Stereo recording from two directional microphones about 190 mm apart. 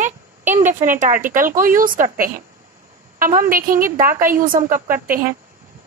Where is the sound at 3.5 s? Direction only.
45° right (ahead or behind).